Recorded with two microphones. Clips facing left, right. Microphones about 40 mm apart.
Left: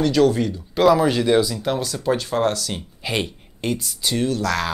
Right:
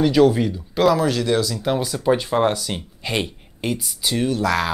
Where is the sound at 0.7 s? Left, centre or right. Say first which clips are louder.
Left 2 dB; centre.